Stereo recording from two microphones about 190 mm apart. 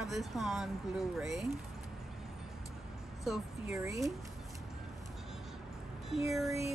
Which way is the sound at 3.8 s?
15° right (ahead or behind).